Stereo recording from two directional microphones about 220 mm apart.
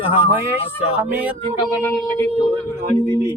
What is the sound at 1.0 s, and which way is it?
Speech, 10° right (ahead or behind).